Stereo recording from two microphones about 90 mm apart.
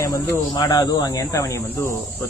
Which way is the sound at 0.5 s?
45° left (ahead or behind).